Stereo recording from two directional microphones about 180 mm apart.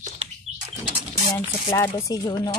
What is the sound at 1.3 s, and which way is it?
Speech, 15° left (ahead or behind).